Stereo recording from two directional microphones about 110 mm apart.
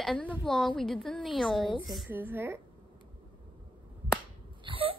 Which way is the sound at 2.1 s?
20° right (ahead or behind).